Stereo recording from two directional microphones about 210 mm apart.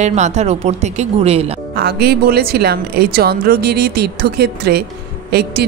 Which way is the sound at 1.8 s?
50° right (ahead or behind).